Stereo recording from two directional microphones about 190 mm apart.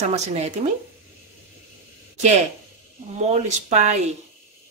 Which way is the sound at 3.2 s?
40° right (ahead or behind).